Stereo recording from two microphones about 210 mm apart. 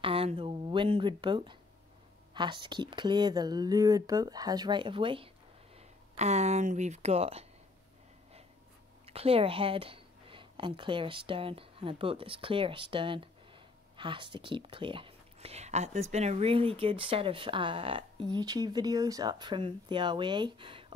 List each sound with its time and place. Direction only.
0.0 s speech: 25° right (ahead or behind)
9.0 s a woman's voice: 30° right (ahead or behind)